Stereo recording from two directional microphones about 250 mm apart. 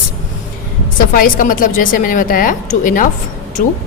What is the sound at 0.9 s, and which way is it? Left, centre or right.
A woman's voice, left.